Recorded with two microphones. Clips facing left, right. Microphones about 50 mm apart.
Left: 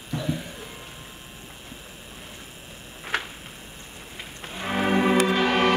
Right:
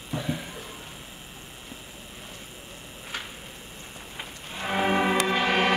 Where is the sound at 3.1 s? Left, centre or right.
Left.